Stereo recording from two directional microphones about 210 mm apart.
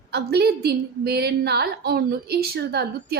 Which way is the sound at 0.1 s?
50° right (ahead or behind).